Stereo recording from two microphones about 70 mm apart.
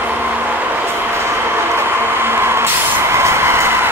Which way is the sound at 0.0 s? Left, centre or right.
Right.